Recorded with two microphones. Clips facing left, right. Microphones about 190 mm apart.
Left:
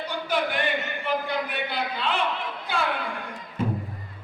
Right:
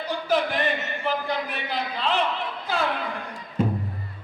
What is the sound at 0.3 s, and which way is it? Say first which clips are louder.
A man's voice: right 3 dB; 35° right (ahead or behind).